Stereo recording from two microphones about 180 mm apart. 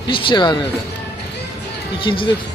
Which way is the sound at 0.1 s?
25° left (ahead or behind).